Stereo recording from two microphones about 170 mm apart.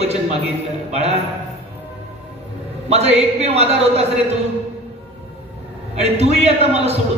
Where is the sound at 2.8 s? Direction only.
40° right (ahead or behind).